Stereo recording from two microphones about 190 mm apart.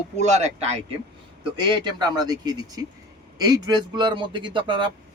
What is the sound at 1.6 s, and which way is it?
A man's voice, 25° right (ahead or behind).